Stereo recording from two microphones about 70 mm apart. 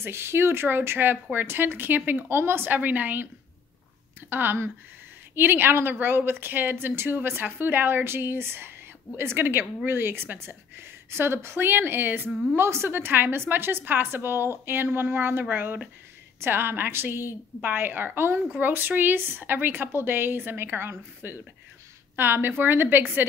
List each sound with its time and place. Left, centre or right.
0.0 s a woman's voice: right
4.3 s a woman's voice: right
12.3 s a woman's voice: centre
12.5 s a woman's voice: right